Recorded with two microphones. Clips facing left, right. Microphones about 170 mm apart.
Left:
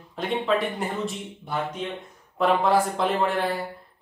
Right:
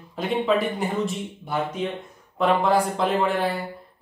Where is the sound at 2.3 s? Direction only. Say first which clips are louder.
Right 1 dB; centre (ahead or behind).